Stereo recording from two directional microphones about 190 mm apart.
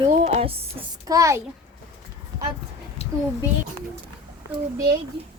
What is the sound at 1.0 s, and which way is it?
Speech, 15° right (ahead or behind).